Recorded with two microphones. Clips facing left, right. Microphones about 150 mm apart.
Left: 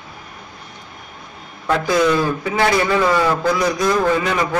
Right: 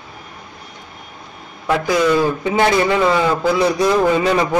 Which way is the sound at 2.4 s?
25° right (ahead or behind).